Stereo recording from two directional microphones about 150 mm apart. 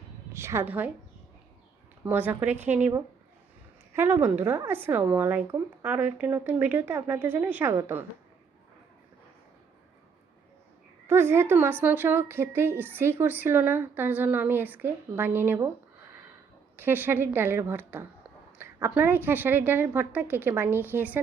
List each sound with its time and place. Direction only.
0.3 s a woman's voice: 15° right (ahead or behind)
2.0 s a woman's voice: 10° right (ahead or behind)
3.9 s a woman's voice: 15° right (ahead or behind)
11.0 s a woman's voice: 15° right (ahead or behind)